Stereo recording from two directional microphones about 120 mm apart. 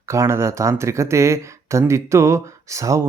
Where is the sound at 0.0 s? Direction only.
25° right (ahead or behind).